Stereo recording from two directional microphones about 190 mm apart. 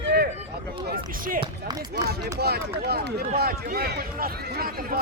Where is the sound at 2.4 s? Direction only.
55° right (ahead or behind).